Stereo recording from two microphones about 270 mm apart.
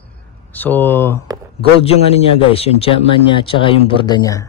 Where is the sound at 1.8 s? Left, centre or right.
Left.